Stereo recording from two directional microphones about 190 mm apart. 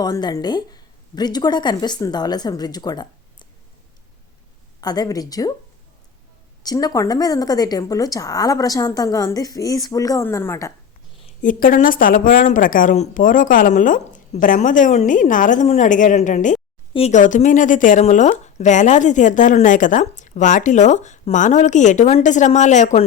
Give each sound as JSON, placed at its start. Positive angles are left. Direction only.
{"t": 0.0, "sound": "a woman's voice", "side_deg": 20}
{"t": 4.8, "sound": "a woman's voice", "side_deg": 20}
{"t": 6.6, "sound": "a woman's voice", "side_deg": 20}
{"t": 11.4, "sound": "a woman's voice", "side_deg": 45}